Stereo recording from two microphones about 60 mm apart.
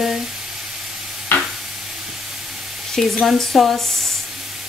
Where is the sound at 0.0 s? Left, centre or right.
Centre.